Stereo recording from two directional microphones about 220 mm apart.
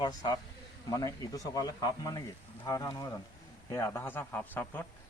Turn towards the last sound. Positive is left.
turn(degrees=10)  # may be behind; listen again after turning